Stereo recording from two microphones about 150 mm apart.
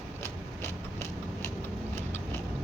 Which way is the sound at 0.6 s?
15° left (ahead or behind).